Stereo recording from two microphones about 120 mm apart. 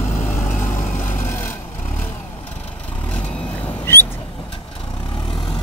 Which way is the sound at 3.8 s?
20° left (ahead or behind).